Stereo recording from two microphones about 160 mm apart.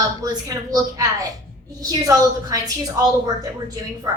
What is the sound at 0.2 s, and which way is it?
A woman's voice, 25° right (ahead or behind).